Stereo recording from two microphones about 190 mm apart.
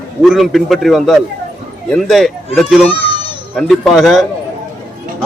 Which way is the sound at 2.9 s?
30° left (ahead or behind).